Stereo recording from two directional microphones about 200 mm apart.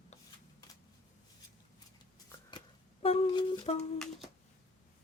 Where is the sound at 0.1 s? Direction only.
35° left (ahead or behind).